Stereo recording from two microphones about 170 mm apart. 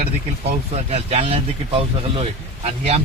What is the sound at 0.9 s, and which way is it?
Speech, 40° right (ahead or behind).